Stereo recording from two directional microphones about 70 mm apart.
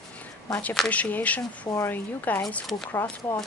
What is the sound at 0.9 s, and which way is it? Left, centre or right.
Speech, left.